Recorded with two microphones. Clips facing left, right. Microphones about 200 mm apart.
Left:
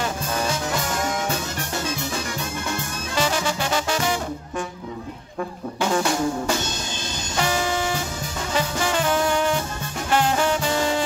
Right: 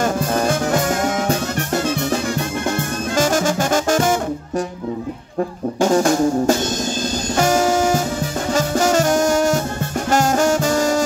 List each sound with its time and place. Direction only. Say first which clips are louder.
0.0 s music: right 7 dB; 50° right (ahead or behind)
5.8 s music: right 7 dB; 40° right (ahead or behind)